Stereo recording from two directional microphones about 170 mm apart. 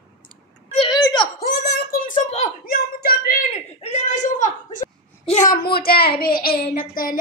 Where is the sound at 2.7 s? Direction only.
60° left (ahead or behind).